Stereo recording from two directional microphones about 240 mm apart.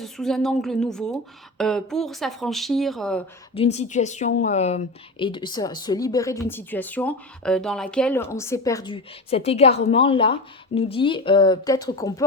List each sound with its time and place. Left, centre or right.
0.0 s speech: centre
3.5 s speech: left